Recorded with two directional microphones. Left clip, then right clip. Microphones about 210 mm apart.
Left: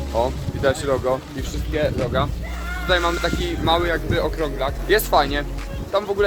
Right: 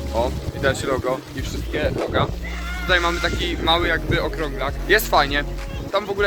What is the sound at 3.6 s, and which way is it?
Speech, centre (ahead or behind).